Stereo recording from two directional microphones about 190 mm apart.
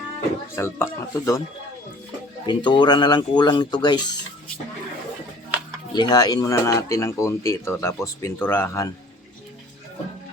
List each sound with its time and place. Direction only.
0.5 s speech: 10° left (ahead or behind)
2.5 s speech: 25° left (ahead or behind)
5.9 s speech: 20° left (ahead or behind)